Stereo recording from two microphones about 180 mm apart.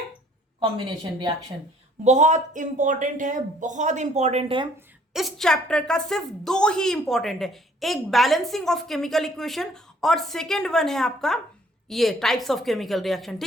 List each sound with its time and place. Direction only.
2.0 s speech: 40° right (ahead or behind)
5.1 s a woman's voice: centre (ahead or behind)